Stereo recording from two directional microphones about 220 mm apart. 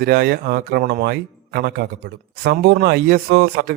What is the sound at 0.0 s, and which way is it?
A man's voice, 45° right (ahead or behind).